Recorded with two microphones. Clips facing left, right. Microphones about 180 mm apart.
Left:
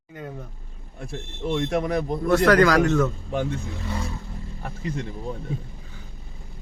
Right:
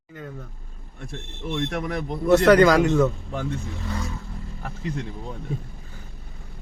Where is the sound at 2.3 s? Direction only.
20° right (ahead or behind).